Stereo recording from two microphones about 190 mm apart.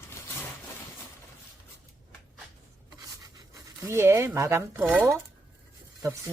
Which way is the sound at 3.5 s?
15° right (ahead or behind).